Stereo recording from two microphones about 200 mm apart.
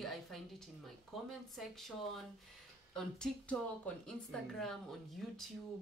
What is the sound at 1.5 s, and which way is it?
A woman's voice, centre (ahead or behind).